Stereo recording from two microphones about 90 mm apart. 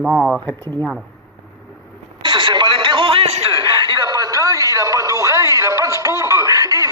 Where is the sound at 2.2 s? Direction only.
60° right (ahead or behind); by 3.3 s 80° right.